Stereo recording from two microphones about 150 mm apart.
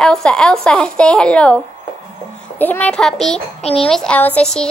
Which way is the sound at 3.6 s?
40° left (ahead or behind).